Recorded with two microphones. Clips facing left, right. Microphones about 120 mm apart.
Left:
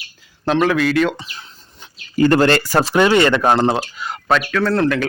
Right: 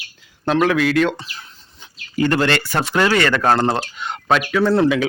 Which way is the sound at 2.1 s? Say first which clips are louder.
Left 4 dB; 40° left (ahead or behind).